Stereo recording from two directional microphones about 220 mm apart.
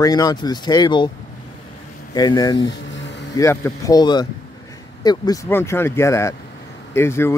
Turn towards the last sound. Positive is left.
turn(degrees=10)  # may be behind; listen again after turning